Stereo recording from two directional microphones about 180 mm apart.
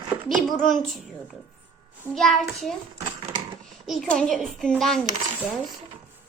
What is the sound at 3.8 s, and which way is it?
Speech, centre (ahead or behind).